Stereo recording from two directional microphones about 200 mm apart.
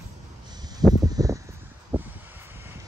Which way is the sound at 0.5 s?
20° right (ahead or behind).